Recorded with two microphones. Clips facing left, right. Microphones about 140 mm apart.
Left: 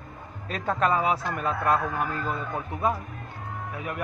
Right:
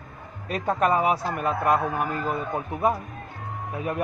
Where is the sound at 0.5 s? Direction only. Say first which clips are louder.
Right 2 dB; 15° right (ahead or behind).